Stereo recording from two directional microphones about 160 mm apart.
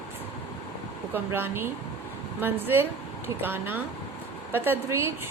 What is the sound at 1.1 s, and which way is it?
A woman's voice, 15° right (ahead or behind).